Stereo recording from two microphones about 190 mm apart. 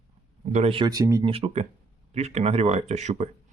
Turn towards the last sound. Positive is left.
turn(degrees=-35)  # may be behind; listen again after turning